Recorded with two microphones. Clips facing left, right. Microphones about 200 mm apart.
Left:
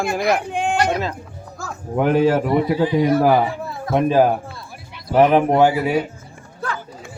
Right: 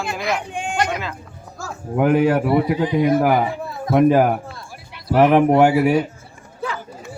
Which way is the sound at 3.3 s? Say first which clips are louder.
Left 2 dB; 20° right (ahead or behind).